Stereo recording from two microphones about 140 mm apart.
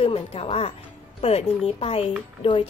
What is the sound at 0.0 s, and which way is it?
A woman's voice, 45° left (ahead or behind).